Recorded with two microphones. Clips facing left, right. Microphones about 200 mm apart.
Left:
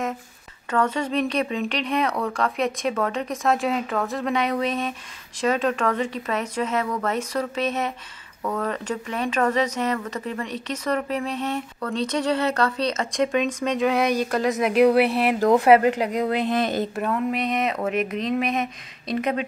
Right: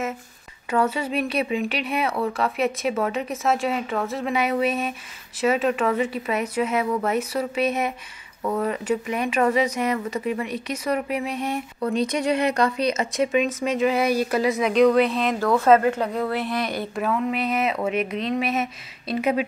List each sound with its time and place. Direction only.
0.7 s a woman's voice: 5° right (ahead or behind); by 16.8 s 25° left (ahead or behind)
16.9 s speech: centre (ahead or behind)